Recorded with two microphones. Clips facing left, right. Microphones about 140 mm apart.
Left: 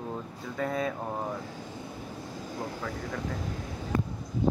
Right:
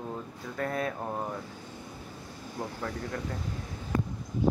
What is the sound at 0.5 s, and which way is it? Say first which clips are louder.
Speech: left 1 dB; centre (ahead or behind).